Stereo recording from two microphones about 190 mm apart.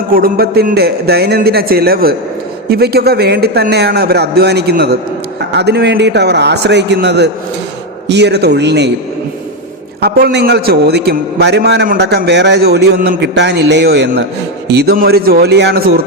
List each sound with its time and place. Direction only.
0.1 s a man's voice: 50° right (ahead or behind)
10.0 s a man's voice: 55° right (ahead or behind)